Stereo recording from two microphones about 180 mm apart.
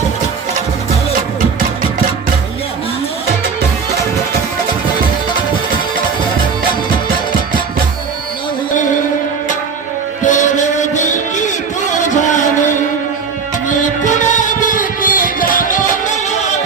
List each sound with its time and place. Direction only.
10.2 s music: 40° left (ahead or behind)